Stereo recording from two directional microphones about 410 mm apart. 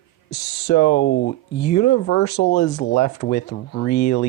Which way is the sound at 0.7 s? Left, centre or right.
Left.